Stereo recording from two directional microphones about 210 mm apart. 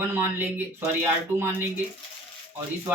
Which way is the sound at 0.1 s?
10° right (ahead or behind).